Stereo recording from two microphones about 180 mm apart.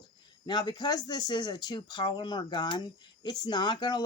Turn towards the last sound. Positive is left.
turn(degrees=25)  # may be behind; listen again after turning